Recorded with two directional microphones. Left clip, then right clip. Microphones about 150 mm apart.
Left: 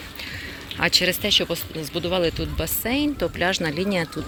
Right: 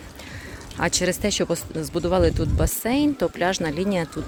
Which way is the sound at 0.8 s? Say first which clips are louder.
Left 3 dB; 40° right (ahead or behind).